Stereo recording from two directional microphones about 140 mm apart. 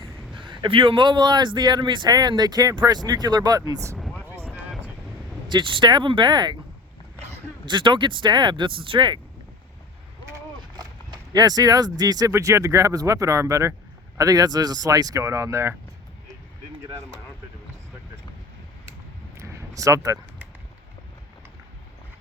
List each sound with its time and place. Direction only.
0.3 s speech: 35° right (ahead or behind)
3.9 s vehicle: 5° left (ahead or behind)
5.5 s speech: 35° right (ahead or behind)
7.6 s speech: 35° right (ahead or behind)
10.2 s speech: 25° right (ahead or behind)
19.4 s a sound: 20° right (ahead or behind)